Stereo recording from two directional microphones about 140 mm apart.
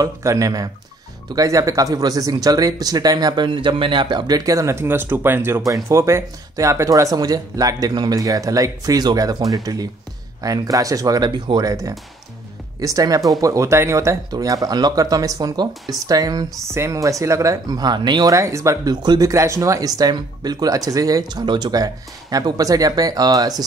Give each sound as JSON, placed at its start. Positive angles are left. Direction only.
{"t": 0.0, "sound": "speech", "side_deg": -25}